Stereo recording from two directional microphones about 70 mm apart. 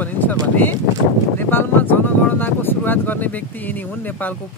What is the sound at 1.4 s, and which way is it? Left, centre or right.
Speech, left.